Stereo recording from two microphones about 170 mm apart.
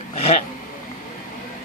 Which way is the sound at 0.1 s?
35° left (ahead or behind).